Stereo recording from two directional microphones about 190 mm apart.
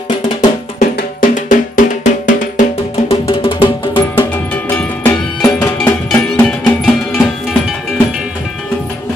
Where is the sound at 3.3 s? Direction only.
25° left (ahead or behind).